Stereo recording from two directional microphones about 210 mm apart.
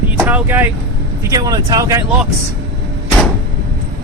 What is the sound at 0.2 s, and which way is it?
Speech, 5° right (ahead or behind).